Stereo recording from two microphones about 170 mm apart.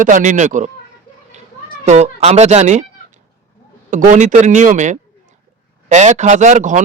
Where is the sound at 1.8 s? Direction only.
45° right (ahead or behind).